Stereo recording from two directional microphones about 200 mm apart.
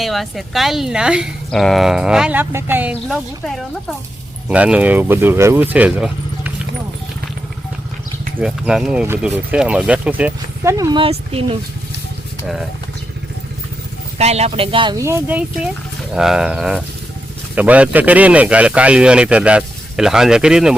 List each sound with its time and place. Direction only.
0.0 s speech: centre (ahead or behind)
8.4 s speech: 5° right (ahead or behind); by 11.6 s 30° right (ahead or behind)
14.2 s speech: 30° right (ahead or behind); by 20.7 s 5° right (ahead or behind)